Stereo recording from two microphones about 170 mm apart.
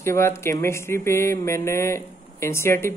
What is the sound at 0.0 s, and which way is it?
Speech, 15° left (ahead or behind).